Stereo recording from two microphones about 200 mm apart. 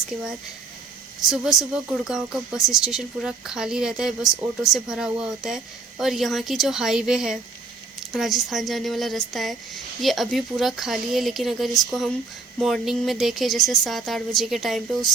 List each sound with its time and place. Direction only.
1.2 s speech: centre (ahead or behind)